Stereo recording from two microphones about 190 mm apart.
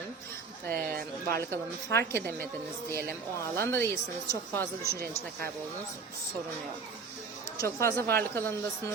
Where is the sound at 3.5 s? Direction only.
60° right (ahead or behind).